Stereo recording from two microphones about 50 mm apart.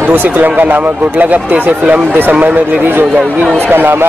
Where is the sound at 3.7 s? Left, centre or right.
Right.